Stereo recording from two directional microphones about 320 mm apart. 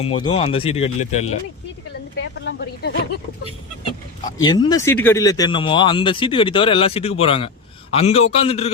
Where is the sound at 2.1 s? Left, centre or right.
Left.